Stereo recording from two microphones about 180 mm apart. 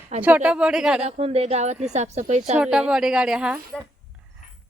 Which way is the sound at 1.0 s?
35° right (ahead or behind).